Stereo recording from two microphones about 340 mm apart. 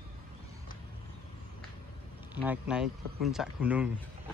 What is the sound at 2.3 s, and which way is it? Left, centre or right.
Speech, centre.